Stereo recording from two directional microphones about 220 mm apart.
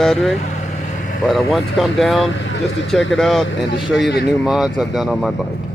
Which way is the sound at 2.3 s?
55° left (ahead or behind).